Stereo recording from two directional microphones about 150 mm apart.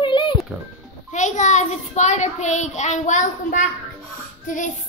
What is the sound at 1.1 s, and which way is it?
A child's voice, 55° left (ahead or behind).